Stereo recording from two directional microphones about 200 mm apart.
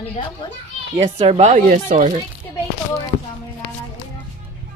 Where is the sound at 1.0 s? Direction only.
30° right (ahead or behind).